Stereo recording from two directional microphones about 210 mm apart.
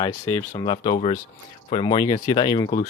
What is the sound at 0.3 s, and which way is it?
Speech, 20° left (ahead or behind).